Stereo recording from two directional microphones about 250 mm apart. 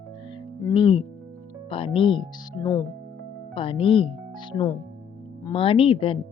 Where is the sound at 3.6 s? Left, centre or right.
Left.